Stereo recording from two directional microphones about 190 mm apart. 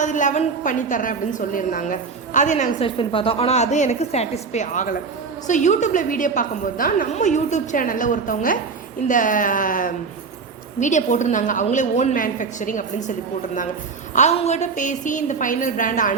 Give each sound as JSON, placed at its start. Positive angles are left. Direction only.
{"t": 0.0, "sound": "a woman's voice", "side_deg": 40}
{"t": 14.2, "sound": "a woman's voice", "side_deg": 35}